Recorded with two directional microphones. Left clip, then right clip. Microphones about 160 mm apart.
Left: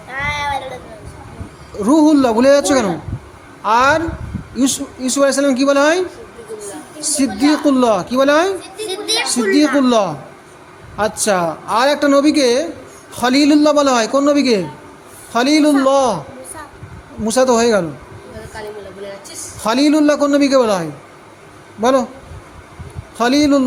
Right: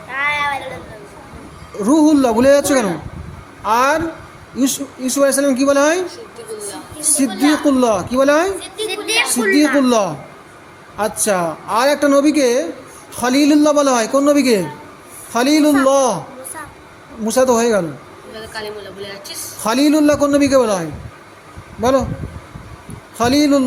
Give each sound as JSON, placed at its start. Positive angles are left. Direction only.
{"t": 0.1, "sound": "a sound", "side_deg": 30}
{"t": 1.8, "sound": "a woman's voice", "side_deg": 5}
{"t": 8.9, "sound": "a sound", "side_deg": 25}
{"t": 9.8, "sound": "a woman's voice", "side_deg": 0}
{"t": 17.2, "sound": "a woman's voice", "side_deg": 5}
{"t": 19.6, "sound": "a woman's voice", "side_deg": 0}
{"t": 23.1, "sound": "a woman's voice", "side_deg": 0}